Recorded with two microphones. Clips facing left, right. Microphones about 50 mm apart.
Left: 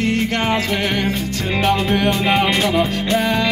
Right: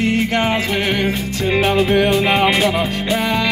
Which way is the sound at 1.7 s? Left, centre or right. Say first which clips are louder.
Right 2 dB; centre.